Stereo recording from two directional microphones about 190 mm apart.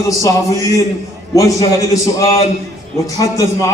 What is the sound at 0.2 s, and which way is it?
A man's voice, 15° left (ahead or behind).